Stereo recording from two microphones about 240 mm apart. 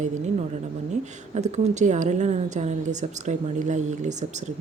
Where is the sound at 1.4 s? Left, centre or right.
Right.